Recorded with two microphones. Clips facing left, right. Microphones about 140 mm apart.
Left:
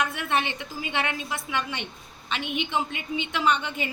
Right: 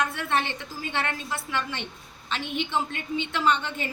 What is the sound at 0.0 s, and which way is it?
A woman's voice, 15° left (ahead or behind).